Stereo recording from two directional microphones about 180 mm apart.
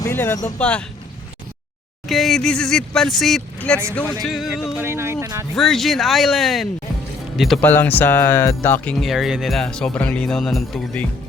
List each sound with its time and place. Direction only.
0.0 s speech: 15° left (ahead or behind)
2.0 s speech: centre (ahead or behind)
4.2 s music: centre (ahead or behind); by 5.5 s 15° right (ahead or behind)
5.5 s speech: centre (ahead or behind)
7.7 s speech: 10° left (ahead or behind)